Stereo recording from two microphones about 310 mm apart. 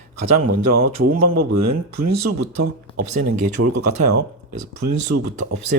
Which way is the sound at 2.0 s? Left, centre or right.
Right.